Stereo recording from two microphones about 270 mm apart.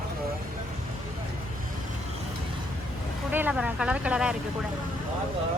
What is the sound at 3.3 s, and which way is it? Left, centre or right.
Speech, centre.